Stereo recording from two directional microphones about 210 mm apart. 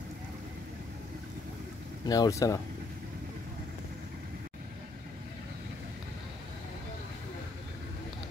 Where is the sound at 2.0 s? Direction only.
20° left (ahead or behind).